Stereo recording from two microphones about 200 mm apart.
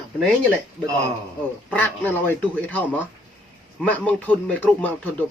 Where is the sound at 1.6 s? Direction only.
10° left (ahead or behind).